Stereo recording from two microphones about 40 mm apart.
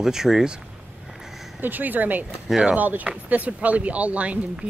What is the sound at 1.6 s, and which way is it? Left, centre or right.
Speech, right.